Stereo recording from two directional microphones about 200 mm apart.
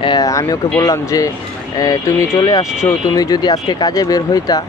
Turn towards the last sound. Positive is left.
turn(degrees=20)  # may be behind; listen again after turning